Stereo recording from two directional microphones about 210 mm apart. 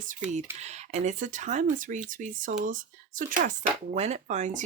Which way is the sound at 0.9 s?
35° right (ahead or behind).